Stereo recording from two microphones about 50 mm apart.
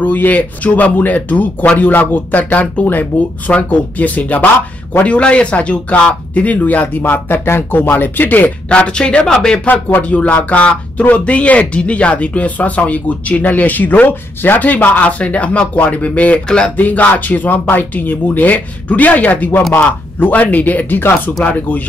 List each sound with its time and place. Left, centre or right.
0.0 s speech: left
8.6 s speech: left
10.0 s speech: left
16.4 s speech: centre
16.7 s speech: left